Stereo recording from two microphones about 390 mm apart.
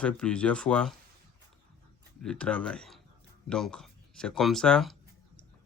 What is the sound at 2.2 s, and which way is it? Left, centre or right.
Speech, centre.